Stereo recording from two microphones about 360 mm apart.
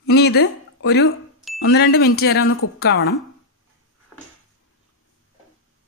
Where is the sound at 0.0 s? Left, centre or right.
Left.